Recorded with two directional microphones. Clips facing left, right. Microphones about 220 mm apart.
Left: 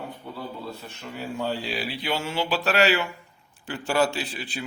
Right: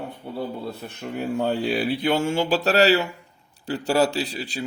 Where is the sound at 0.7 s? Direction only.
60° right (ahead or behind).